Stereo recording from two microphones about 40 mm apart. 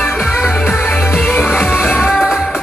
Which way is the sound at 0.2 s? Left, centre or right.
Centre.